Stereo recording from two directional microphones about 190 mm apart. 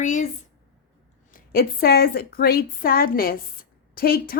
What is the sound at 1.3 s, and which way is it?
A woman's voice, 50° left (ahead or behind).